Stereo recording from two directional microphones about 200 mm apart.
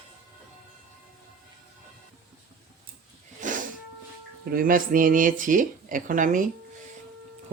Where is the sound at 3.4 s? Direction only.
40° right (ahead or behind).